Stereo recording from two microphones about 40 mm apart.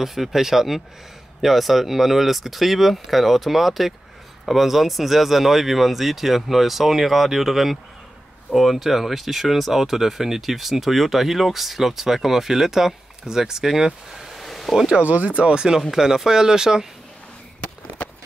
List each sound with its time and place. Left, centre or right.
0.0 s speech: centre
14.9 s speech: right
15.9 s speech: centre
17.6 s a sound: left